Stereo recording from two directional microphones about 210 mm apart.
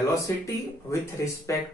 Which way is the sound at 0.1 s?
15° left (ahead or behind).